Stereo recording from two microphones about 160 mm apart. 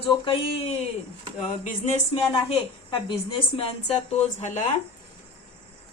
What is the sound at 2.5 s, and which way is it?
A woman's voice, 35° left (ahead or behind).